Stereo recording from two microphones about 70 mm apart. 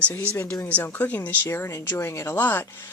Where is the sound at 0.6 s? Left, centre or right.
Left.